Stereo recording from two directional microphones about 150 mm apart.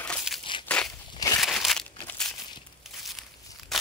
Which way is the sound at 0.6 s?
5° left (ahead or behind).